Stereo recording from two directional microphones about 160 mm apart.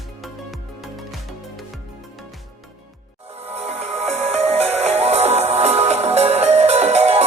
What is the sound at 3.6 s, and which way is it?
Music, 40° right (ahead or behind).